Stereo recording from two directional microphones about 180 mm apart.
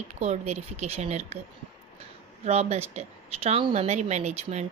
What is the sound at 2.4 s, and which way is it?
A woman's voice, 35° right (ahead or behind).